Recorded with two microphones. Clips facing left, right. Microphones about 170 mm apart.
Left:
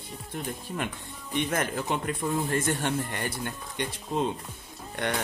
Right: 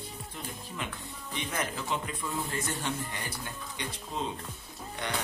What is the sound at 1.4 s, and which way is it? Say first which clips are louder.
Speech: left 7 dB; 50° left (ahead or behind).